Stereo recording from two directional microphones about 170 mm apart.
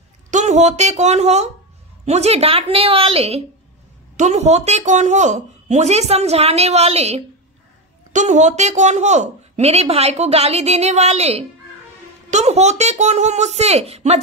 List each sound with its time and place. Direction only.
0.3 s a woman's voice: 45° right (ahead or behind)